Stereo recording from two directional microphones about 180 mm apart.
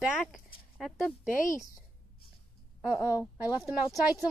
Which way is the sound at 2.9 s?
20° left (ahead or behind).